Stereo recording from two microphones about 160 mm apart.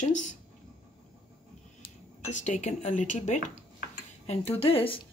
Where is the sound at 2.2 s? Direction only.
50° left (ahead or behind).